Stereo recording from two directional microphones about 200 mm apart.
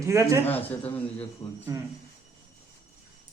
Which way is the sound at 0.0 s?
15° right (ahead or behind).